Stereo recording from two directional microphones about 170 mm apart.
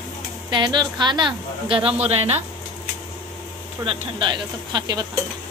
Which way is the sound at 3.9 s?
30° right (ahead or behind).